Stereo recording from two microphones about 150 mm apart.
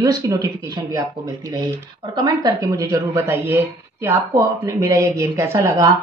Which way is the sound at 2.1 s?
30° right (ahead or behind).